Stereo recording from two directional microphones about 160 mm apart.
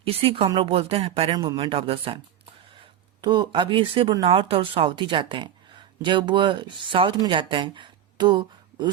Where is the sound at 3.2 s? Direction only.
30° right (ahead or behind).